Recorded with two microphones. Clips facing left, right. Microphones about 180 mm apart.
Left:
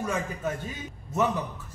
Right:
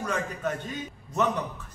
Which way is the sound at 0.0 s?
10° left (ahead or behind).